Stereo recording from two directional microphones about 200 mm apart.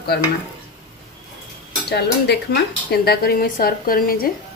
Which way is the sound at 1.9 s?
55° left (ahead or behind).